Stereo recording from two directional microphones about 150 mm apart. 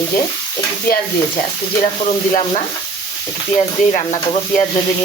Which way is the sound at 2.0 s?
45° left (ahead or behind).